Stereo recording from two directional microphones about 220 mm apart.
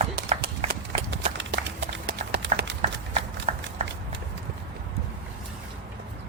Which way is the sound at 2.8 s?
30° right (ahead or behind).